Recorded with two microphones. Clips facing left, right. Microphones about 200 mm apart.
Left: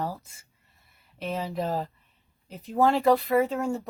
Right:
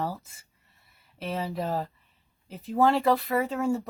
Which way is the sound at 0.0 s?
Centre (ahead or behind).